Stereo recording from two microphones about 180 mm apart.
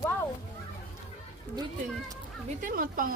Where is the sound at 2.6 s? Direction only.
50° right (ahead or behind).